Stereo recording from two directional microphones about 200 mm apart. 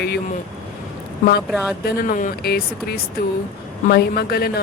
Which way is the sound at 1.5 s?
5° right (ahead or behind).